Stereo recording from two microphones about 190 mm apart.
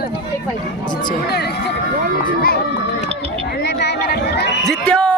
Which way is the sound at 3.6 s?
60° left (ahead or behind).